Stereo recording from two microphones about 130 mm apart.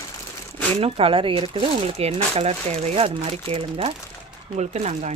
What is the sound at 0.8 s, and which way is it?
Speech, 50° right (ahead or behind).